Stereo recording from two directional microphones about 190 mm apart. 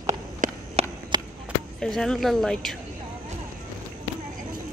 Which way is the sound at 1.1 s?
20° right (ahead or behind).